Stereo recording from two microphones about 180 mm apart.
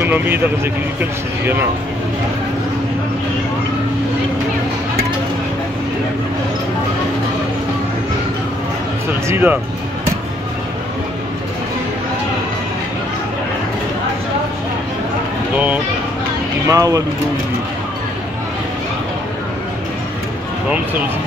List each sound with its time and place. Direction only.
0.0 s speech: 10° right (ahead or behind)
1.4 s speech: 10° right (ahead or behind)
9.3 s speech: 10° right (ahead or behind)
15.5 s speech: 10° right (ahead or behind)
16.6 s speech: 20° right (ahead or behind)